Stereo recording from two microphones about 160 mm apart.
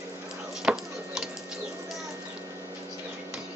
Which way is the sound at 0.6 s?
5° right (ahead or behind).